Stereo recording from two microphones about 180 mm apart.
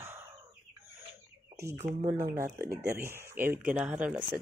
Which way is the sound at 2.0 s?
15° right (ahead or behind).